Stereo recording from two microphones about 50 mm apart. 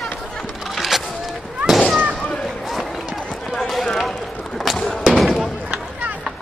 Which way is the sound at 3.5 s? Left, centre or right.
Centre.